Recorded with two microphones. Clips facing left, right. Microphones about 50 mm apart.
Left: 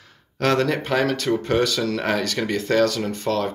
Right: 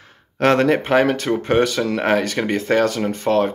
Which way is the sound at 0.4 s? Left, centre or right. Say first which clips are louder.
Right 5 dB; right.